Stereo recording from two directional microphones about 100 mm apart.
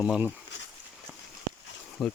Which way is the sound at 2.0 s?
Centre (ahead or behind).